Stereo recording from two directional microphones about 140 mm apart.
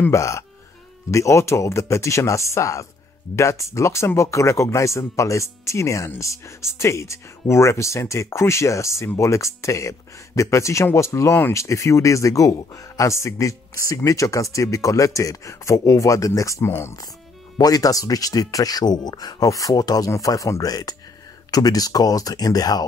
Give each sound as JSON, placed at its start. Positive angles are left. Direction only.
{"t": 0.0, "sound": "speech", "side_deg": 20}